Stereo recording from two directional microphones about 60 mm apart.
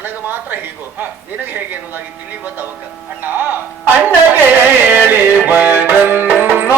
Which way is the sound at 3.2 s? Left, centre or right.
Right.